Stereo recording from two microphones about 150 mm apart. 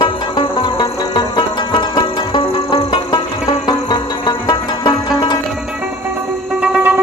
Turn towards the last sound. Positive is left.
turn(degrees=-10)  # may be behind; listen again after turning